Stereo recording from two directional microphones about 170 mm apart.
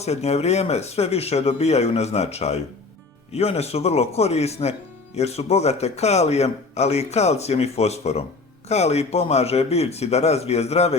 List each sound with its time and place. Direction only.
0.0 s a man's voice: 40° left (ahead or behind)